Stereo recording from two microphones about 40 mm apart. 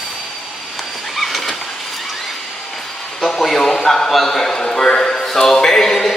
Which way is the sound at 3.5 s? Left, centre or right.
Centre.